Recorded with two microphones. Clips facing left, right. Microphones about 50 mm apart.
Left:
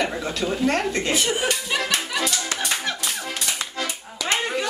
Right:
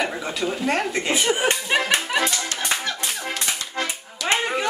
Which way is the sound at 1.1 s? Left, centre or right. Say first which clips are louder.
Right 5 dB; right.